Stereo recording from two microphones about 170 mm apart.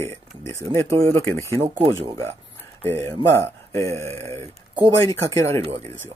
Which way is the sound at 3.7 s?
15° left (ahead or behind).